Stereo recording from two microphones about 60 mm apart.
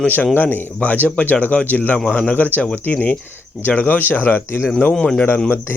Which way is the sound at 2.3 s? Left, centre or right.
Left.